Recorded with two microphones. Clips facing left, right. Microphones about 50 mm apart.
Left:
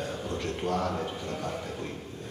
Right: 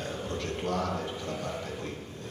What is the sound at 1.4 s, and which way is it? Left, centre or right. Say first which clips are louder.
Speech: left 1 dB; centre.